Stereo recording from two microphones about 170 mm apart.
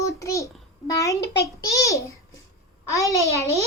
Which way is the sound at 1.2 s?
90° left.